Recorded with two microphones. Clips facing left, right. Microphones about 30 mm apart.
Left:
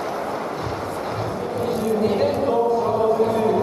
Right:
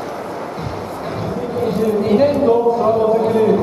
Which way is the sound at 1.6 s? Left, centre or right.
Centre.